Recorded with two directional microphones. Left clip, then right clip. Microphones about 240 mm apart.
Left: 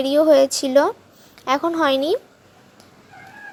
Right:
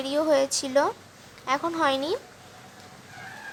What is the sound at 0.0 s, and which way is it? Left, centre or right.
A woman's voice, centre.